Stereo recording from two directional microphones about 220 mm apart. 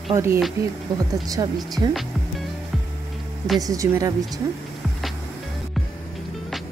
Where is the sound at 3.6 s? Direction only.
15° right (ahead or behind).